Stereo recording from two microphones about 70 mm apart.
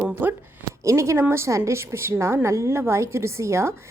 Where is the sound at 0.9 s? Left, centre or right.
Right.